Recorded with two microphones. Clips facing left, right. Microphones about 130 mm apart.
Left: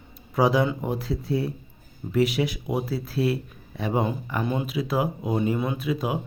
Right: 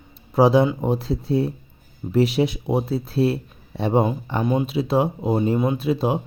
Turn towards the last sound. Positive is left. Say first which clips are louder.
# right 5 dB
turn(degrees=-30)  # may be behind; listen again after turning